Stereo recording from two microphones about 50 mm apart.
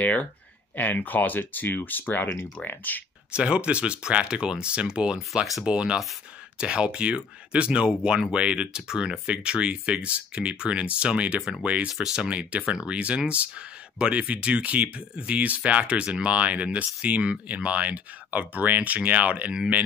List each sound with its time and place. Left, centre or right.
0.0 s speech: left
3.3 s speech: right